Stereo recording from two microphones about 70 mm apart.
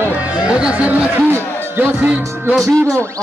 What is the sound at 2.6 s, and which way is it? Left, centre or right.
Speech, centre.